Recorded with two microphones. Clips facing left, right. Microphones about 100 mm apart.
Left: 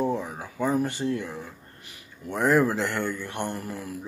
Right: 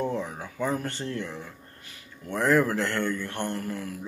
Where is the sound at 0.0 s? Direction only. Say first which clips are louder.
Left 2 dB; 10° left (ahead or behind).